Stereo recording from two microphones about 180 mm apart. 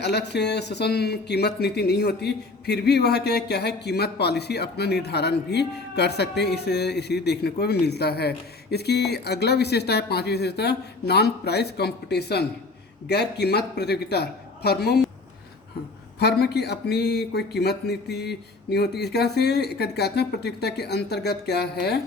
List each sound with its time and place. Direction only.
0.0 s speech: 70° left (ahead or behind)
16.1 s speech: 65° left (ahead or behind)